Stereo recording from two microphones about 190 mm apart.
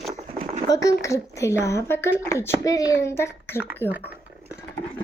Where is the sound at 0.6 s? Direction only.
20° left (ahead or behind).